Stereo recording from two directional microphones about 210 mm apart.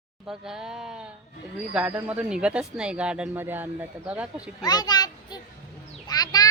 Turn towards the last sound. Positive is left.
turn(degrees=20)  # may be behind; listen again after turning